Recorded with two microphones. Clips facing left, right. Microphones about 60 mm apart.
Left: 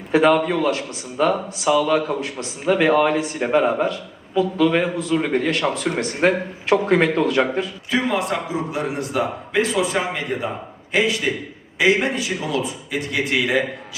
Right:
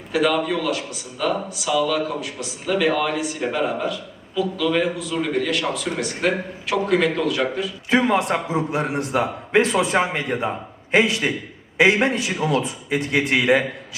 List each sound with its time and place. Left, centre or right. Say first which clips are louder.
0.1 s a man's voice: left 4 dB; left
7.9 s a man's voice: right 4 dB; right
11.8 s a man's voice: right 1 dB; right